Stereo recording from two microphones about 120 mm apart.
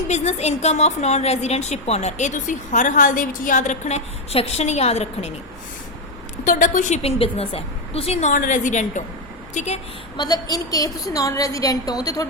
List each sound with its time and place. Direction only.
0.1 s a woman's voice: 65° left (ahead or behind)
6.4 s a woman's voice: 90° left
7.2 s a woman's voice: 50° left (ahead or behind)
8.3 s a woman's voice: 90° left
9.6 s a woman's voice: 65° left (ahead or behind)
10.2 s a woman's voice: 35° left (ahead or behind)